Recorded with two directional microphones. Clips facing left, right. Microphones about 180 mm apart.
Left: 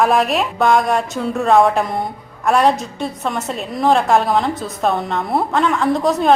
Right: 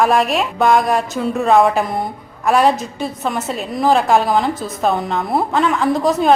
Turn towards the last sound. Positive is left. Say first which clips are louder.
# right 1 dB
turn(degrees=0)  # may be behind; listen again after turning